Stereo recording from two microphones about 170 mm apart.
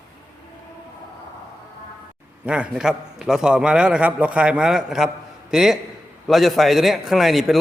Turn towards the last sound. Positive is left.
turn(degrees=0)  # may be behind; listen again after turning